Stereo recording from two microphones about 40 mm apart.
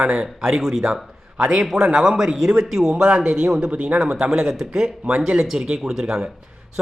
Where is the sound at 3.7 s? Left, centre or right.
Right.